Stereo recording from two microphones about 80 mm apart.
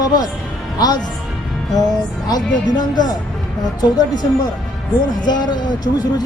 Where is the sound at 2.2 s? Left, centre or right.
Left.